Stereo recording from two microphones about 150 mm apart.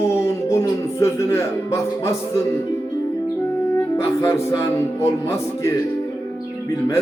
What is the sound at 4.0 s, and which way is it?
Speech, 20° left (ahead or behind).